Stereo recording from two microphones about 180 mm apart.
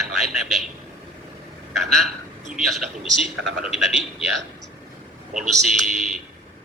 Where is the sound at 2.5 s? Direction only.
Centre (ahead or behind).